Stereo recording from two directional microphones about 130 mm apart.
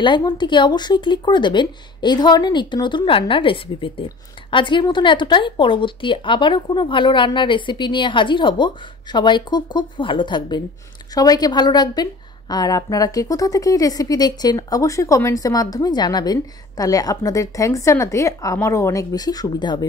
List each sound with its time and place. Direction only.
0.0 s a woman's voice: 35° left (ahead or behind)